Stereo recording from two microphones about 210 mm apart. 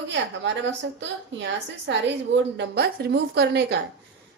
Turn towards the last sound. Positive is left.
turn(degrees=-50)  # may be behind; listen again after turning